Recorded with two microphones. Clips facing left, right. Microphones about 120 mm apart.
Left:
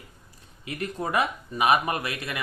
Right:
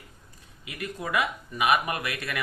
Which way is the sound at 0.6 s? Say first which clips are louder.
Left 4 dB; 35° left (ahead or behind).